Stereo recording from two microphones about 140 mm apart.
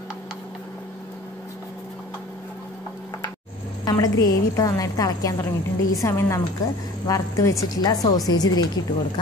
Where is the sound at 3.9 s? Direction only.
25° left (ahead or behind).